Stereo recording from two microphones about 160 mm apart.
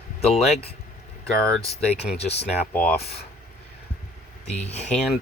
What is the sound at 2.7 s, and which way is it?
Speech, 10° left (ahead or behind).